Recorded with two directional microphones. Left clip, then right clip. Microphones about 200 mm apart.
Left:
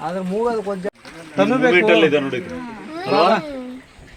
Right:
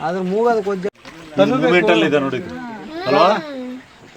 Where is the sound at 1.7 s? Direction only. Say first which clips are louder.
Even; 65° right (ahead or behind).